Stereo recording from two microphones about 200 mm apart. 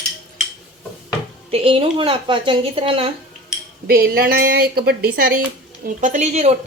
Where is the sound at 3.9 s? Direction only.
50° right (ahead or behind).